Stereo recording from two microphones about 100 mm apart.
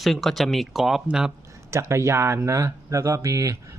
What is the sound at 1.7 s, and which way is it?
Speech, 30° right (ahead or behind).